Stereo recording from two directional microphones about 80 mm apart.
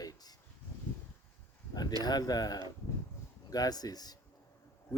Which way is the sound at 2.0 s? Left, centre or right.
Left.